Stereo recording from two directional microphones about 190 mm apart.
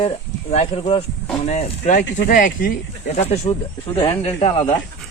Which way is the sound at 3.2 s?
35° left (ahead or behind).